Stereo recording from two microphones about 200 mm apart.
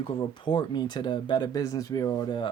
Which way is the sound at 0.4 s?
20° left (ahead or behind).